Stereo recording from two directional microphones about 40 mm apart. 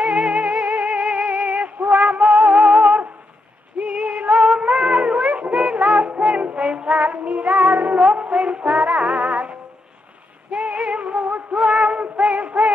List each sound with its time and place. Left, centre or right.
0.0 s music: right
1.9 s music: right
2.1 s music: centre
3.8 s female singing: right
4.3 s music: right
10.5 s female singing: right
10.9 s music: right
11.5 s a sound: centre
12.0 s music: right